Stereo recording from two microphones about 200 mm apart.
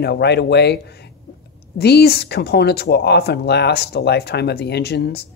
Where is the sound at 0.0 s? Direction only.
55° left (ahead or behind).